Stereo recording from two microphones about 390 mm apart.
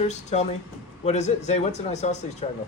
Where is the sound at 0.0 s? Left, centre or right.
Centre.